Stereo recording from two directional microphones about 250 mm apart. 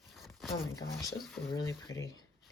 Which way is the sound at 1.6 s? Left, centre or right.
Centre.